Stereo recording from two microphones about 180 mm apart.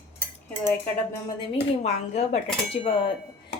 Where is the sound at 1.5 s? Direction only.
35° left (ahead or behind).